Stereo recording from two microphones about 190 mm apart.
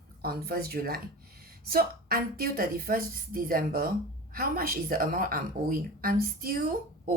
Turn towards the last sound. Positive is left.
turn(degrees=-50)  # may be behind; listen again after turning